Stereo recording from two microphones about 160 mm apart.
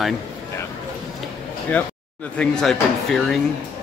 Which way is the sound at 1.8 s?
10° left (ahead or behind).